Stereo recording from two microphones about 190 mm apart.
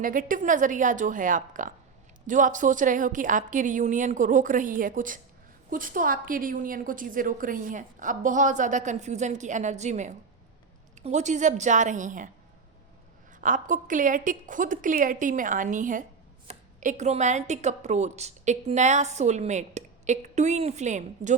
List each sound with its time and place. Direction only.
0.0 s a woman's voice: 45° right (ahead or behind)
13.4 s a woman's voice: 45° right (ahead or behind)